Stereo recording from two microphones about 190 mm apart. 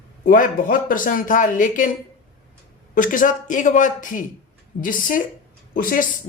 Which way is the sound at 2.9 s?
45° left (ahead or behind).